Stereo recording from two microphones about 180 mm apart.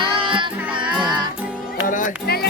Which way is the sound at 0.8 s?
25° right (ahead or behind).